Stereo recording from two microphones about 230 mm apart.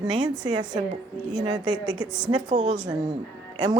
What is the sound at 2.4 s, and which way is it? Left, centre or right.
Speech, right.